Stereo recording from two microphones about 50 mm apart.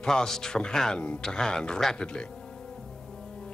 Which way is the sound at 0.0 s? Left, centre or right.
Centre.